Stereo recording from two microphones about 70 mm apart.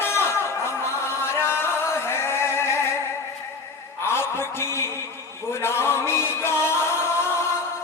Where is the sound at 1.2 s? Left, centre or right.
Left.